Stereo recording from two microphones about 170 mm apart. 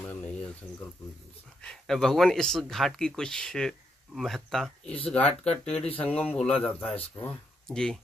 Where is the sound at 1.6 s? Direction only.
Centre (ahead or behind).